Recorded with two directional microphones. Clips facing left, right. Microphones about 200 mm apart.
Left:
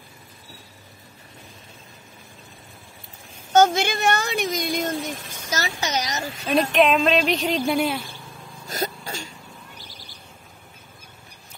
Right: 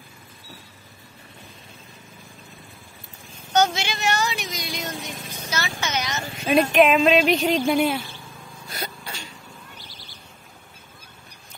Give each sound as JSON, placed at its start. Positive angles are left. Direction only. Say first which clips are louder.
{"t": 3.5, "sound": "speech", "louder": "left 4 dB", "side_deg": 50}
{"t": 5.5, "sound": "a child's voice", "louder": "left 2 dB", "side_deg": 40}
{"t": 6.4, "sound": "speech", "louder": "right 2 dB", "side_deg": 0}
{"t": 8.6, "sound": "vehicle", "louder": "left 6 dB", "side_deg": 40}